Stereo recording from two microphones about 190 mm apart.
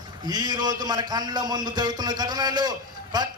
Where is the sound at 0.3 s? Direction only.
20° right (ahead or behind).